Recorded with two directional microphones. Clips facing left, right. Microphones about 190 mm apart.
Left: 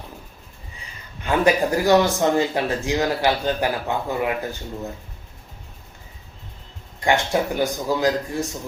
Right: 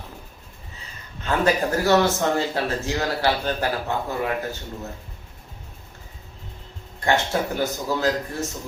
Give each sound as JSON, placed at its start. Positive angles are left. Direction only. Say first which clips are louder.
{"t": 1.2, "sound": "speech", "louder": "left 3 dB", "side_deg": 15}
{"t": 7.0, "sound": "speech", "louder": "left 2 dB", "side_deg": 15}